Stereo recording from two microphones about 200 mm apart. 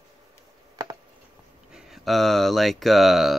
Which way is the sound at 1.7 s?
Centre (ahead or behind).